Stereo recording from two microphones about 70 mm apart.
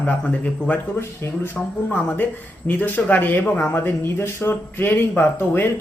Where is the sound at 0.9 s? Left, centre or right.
Left.